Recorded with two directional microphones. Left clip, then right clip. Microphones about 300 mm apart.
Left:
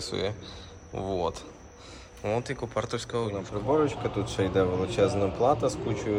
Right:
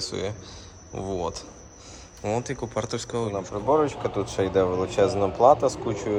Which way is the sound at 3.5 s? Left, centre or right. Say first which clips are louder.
Right 3 dB; right.